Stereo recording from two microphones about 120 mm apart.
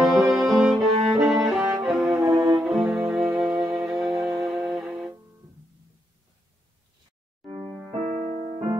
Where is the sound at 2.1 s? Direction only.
30° right (ahead or behind).